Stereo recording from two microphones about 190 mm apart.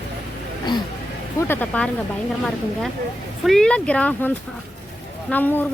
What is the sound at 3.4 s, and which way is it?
Speech, 5° left (ahead or behind).